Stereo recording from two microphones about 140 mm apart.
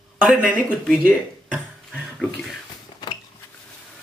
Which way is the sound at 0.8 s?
5° right (ahead or behind).